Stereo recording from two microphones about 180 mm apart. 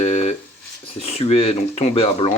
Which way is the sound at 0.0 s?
35° left (ahead or behind).